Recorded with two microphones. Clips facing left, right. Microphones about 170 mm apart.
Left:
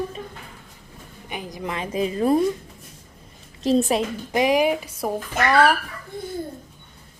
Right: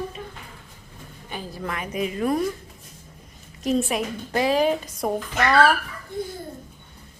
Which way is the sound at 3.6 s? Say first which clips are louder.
Left 4 dB; 35° left (ahead or behind).